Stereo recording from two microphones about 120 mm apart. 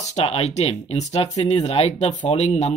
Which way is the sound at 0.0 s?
60° left (ahead or behind).